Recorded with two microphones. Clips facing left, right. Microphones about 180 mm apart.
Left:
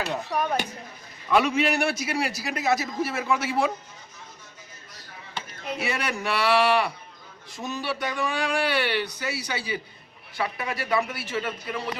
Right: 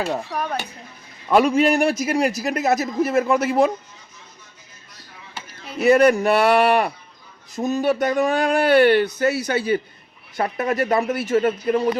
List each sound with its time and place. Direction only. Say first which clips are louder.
1.3 s a man's voice: right 6 dB; 40° right (ahead or behind)
5.8 s speech: right 16 dB; 45° right (ahead or behind)